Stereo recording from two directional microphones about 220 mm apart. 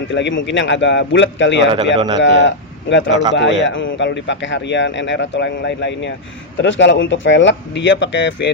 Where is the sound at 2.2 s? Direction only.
55° left (ahead or behind).